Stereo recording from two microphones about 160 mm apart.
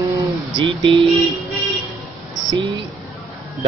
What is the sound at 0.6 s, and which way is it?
Speech, 30° right (ahead or behind).